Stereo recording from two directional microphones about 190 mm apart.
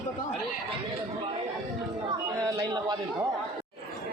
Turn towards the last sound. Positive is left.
turn(degrees=-20)  # may be behind; listen again after turning